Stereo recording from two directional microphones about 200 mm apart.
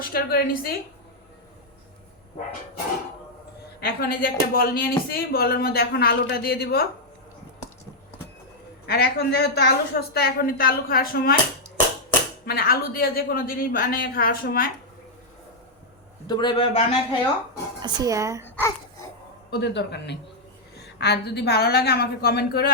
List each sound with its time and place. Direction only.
0.0 s speech: 50° left (ahead or behind)
3.8 s speech: 50° left (ahead or behind)
8.9 s speech: 50° left (ahead or behind)
12.5 s speech: 50° left (ahead or behind)
16.2 s speech: 20° left (ahead or behind)
17.7 s speech: 20° right (ahead or behind)
18.4 s speech: 10° left (ahead or behind)
19.5 s speech: 55° left (ahead or behind)